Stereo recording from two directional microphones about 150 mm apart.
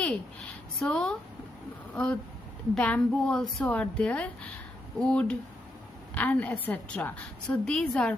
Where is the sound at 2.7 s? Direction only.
5° left (ahead or behind).